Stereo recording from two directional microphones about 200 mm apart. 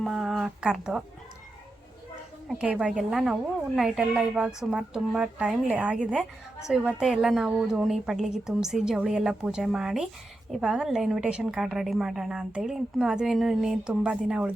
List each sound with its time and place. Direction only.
0.0 s a woman's voice: centre (ahead or behind)
2.5 s a woman's voice: 5° right (ahead or behind)